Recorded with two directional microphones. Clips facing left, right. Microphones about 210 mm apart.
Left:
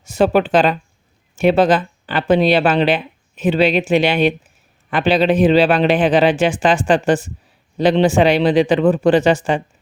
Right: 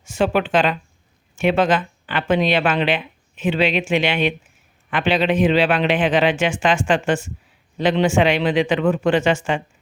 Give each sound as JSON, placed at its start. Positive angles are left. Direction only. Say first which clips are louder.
{"t": 0.0, "sound": "speech", "louder": "left 5 dB", "side_deg": 40}